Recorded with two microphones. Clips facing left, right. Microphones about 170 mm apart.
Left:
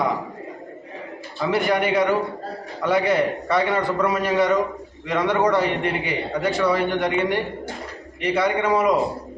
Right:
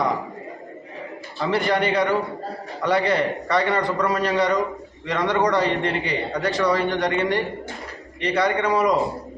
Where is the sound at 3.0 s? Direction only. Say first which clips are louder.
Left 1 dB; 5° left (ahead or behind).